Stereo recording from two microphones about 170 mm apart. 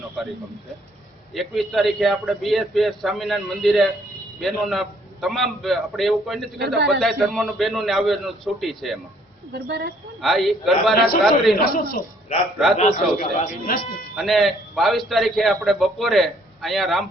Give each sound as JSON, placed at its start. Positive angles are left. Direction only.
{"t": 0.2, "sound": "a man's voice", "side_deg": 0}
{"t": 6.7, "sound": "a woman's voice", "side_deg": -75}
{"t": 7.0, "sound": "a man's voice", "side_deg": 0}
{"t": 9.5, "sound": "a woman's voice", "side_deg": -75}
{"t": 10.2, "sound": "a man's voice", "side_deg": 0}
{"t": 10.9, "sound": "a man's voice", "side_deg": 60}
{"t": 12.7, "sound": "speech", "side_deg": 45}
{"t": 14.2, "sound": "a man's voice", "side_deg": 0}